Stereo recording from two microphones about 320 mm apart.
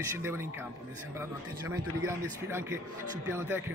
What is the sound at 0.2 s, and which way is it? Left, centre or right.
Speech, centre.